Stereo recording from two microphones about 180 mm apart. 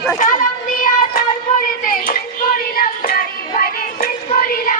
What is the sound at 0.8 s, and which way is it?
Music, 50° left (ahead or behind).